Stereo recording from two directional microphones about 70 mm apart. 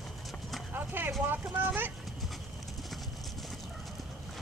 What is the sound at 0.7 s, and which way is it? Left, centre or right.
Clip-clop, right.